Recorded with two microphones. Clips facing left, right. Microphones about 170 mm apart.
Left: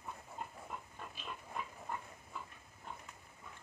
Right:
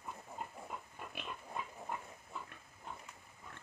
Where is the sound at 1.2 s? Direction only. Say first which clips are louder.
Right 3 dB; 65° right (ahead or behind).